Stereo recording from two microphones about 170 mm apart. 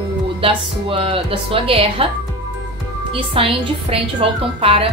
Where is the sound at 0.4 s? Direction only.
30° right (ahead or behind).